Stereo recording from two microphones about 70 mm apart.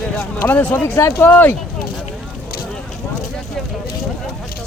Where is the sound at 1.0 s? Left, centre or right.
Left.